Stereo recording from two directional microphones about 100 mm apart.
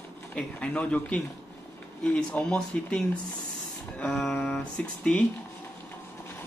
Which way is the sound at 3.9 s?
5° left (ahead or behind).